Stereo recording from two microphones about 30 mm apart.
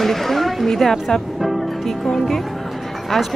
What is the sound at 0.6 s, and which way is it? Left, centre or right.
Speech, centre.